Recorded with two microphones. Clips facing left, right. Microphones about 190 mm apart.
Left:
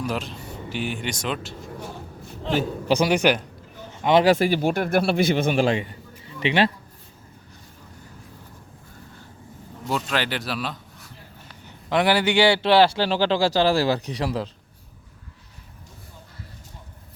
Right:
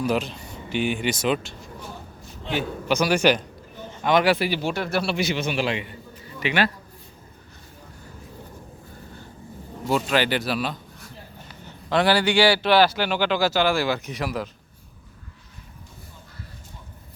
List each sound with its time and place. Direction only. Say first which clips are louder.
0.0 s speech: right 4 dB; centre (ahead or behind)
2.4 s a man's voice: left 3 dB; 35° left (ahead or behind)
4.3 s a man's voice: left 4 dB; 45° left (ahead or behind)
6.4 s speech: left 3 dB; 30° left (ahead or behind)
9.8 s speech: right 4 dB; 5° right (ahead or behind)
11.6 s a man's voice: even; 15° left (ahead or behind)